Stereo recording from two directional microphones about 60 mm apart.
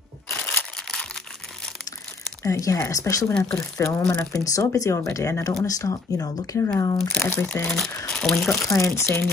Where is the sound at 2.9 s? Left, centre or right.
Left.